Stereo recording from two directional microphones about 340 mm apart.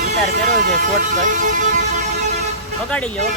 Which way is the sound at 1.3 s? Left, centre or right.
Right.